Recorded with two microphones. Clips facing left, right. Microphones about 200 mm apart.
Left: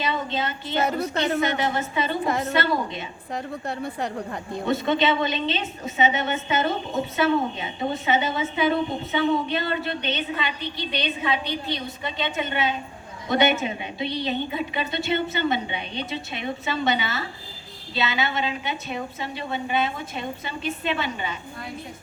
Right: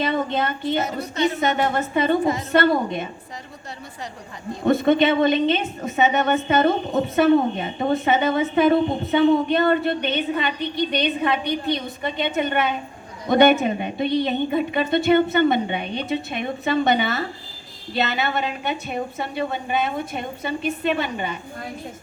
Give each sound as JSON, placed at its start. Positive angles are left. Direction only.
{"t": 0.0, "sound": "a woman's voice", "side_deg": -55}
{"t": 0.9, "sound": "a woman's voice", "side_deg": 60}
{"t": 1.4, "sound": "a woman's voice", "side_deg": -55}
{"t": 2.2, "sound": "a woman's voice", "side_deg": 60}
{"t": 2.5, "sound": "a woman's voice", "side_deg": -55}
{"t": 3.3, "sound": "a woman's voice", "side_deg": 60}
{"t": 4.6, "sound": "a woman's voice", "side_deg": -55}